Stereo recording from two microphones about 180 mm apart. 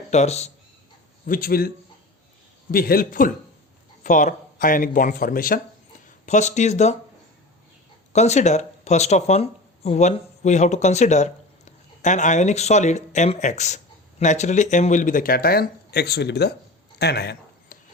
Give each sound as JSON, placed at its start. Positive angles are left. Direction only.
{"t": 0.1, "sound": "speech", "side_deg": 40}
{"t": 1.2, "sound": "speech", "side_deg": 50}
{"t": 2.7, "sound": "a man's voice", "side_deg": 55}
{"t": 6.2, "sound": "speech", "side_deg": 40}
{"t": 8.1, "sound": "speech", "side_deg": 40}
{"t": 17.0, "sound": "a sound", "side_deg": 65}